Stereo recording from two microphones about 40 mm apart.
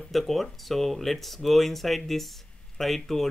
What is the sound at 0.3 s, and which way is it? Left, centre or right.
Speech, centre.